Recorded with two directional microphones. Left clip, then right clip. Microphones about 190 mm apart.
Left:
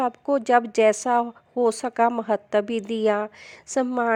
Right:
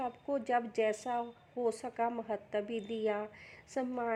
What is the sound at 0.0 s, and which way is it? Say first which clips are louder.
Speech: left 13 dB; 40° left (ahead or behind).